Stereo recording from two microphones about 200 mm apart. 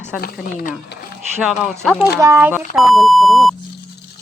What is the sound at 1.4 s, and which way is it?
Speech, centre (ahead or behind).